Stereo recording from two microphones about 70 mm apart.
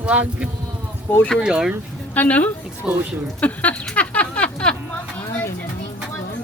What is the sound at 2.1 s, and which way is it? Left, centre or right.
Speech, left.